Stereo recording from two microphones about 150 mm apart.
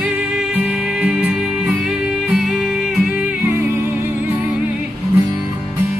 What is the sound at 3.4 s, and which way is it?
Music, 20° right (ahead or behind).